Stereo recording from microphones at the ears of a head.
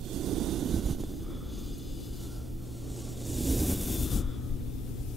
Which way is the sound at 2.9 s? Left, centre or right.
Centre.